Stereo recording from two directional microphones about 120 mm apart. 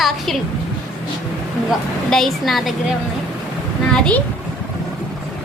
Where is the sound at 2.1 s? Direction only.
Centre (ahead or behind).